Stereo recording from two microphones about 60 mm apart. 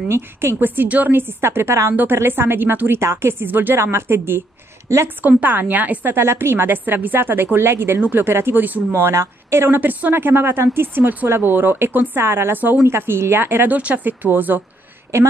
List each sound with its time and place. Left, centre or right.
0.1 s a woman's voice: right
3.0 s a woman's voice: right
3.7 s speech: right
5.4 s a woman's voice: right
9.0 s a woman's voice: right
12.2 s a woman's voice: right
13.7 s speech: right